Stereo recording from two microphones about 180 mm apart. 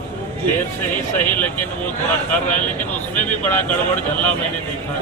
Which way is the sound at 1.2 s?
10° left (ahead or behind).